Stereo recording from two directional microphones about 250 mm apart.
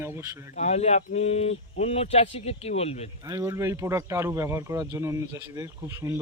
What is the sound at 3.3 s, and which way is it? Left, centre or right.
A man's voice, centre.